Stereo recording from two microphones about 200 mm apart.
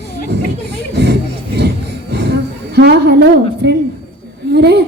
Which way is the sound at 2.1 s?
55° right (ahead or behind).